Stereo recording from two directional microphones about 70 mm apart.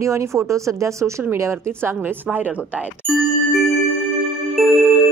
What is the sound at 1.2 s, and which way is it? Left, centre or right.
Speech, right.